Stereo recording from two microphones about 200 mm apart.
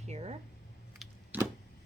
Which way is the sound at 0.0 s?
35° right (ahead or behind).